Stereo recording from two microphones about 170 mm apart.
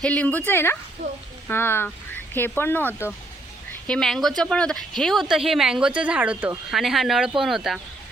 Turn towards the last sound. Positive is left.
turn(degrees=0)  # may be behind; listen again after turning